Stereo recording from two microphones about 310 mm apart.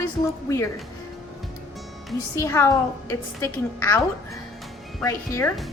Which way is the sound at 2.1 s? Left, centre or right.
Centre.